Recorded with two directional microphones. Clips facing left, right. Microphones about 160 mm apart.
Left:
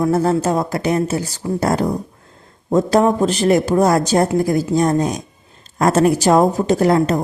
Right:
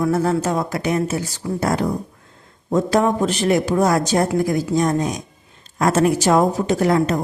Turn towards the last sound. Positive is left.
turn(degrees=35)  # may be behind; listen again after turning